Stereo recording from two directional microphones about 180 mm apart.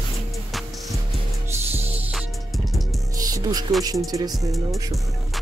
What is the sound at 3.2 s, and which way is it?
Music, 20° right (ahead or behind).